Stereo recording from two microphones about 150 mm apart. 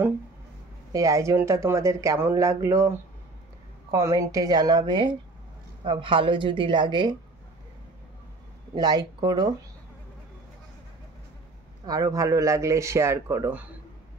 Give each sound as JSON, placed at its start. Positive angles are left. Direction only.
{"t": 0.9, "sound": "a woman's voice", "side_deg": -20}
{"t": 8.7, "sound": "speech", "side_deg": -25}
{"t": 11.8, "sound": "speech", "side_deg": -25}